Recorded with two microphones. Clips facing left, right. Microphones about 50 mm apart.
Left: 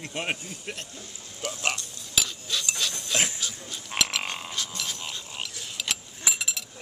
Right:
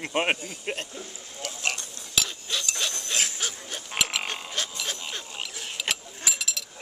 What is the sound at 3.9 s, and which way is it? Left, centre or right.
Livestock, centre.